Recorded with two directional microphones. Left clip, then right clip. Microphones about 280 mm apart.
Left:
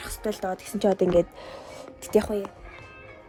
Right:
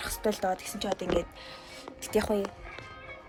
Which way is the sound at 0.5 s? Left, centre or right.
Left.